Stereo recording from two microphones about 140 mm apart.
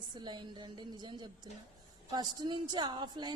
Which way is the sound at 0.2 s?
30° right (ahead or behind).